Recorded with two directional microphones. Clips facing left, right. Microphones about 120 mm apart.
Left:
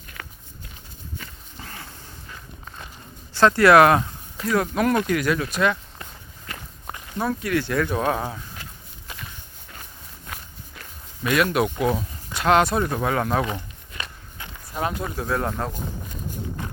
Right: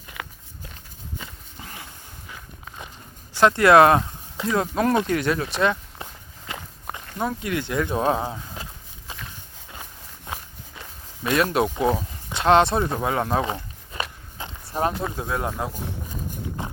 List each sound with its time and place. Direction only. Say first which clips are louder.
1.2 s livestock: even; 15° right (ahead or behind)
2.3 s walk: right 1 dB; 10° right (ahead or behind)
3.3 s speech: even; 20° right (ahead or behind)
10.8 s a sound: left 1 dB; 25° right (ahead or behind)
12.3 s walk: right 1 dB; 30° right (ahead or behind)
15.1 s speech: left 2 dB; 20° right (ahead or behind)